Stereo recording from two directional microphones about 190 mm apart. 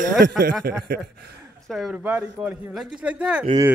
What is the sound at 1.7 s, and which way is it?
A man's voice, centre (ahead or behind).